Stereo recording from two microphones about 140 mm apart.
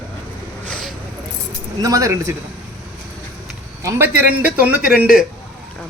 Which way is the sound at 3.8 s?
20° right (ahead or behind).